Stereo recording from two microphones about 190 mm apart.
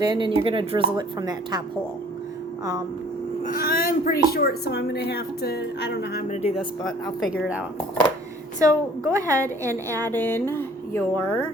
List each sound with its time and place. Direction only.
0.1 s speech: 25° right (ahead or behind)
3.4 s speech: 50° left (ahead or behind)
6.2 s speech: 40° left (ahead or behind)
8.5 s a woman's voice: 15° right (ahead or behind)
10.1 s a sound: 10° left (ahead or behind)